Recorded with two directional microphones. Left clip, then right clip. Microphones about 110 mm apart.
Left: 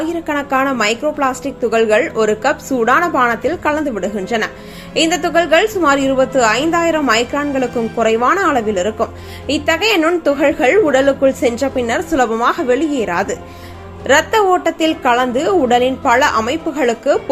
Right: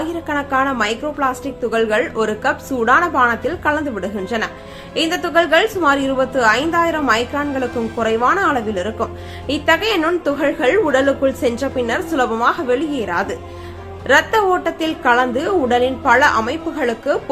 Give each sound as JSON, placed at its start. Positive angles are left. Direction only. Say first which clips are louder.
{"t": 0.3, "sound": "a woman's voice", "louder": "left 1 dB", "side_deg": 30}